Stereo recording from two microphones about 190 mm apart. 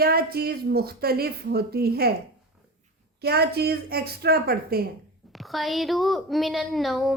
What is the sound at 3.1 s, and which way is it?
A woman's voice, 55° right (ahead or behind).